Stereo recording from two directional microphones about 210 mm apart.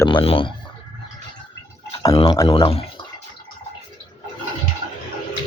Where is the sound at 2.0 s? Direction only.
20° left (ahead or behind).